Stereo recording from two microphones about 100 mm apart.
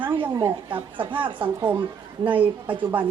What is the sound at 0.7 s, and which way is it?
Speech, 60° right (ahead or behind).